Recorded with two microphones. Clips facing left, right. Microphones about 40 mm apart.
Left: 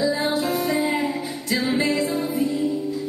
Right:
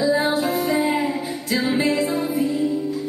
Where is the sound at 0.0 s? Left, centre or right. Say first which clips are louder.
Right 3 dB; centre.